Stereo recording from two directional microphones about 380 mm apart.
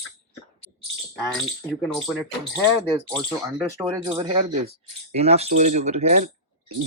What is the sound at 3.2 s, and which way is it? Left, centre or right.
Speech, centre.